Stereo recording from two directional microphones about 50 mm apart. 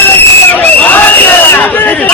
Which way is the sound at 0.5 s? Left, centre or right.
Left.